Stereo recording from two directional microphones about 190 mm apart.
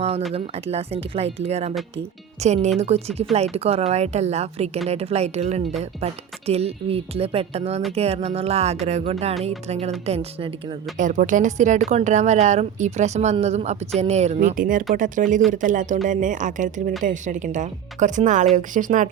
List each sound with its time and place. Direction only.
0.3 s a woman's voice: 30° right (ahead or behind)
10.9 s speech: 40° right (ahead or behind)